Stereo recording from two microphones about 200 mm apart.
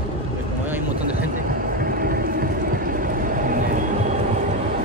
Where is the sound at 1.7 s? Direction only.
45° right (ahead or behind).